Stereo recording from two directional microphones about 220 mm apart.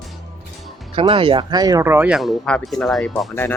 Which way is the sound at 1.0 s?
25° right (ahead or behind).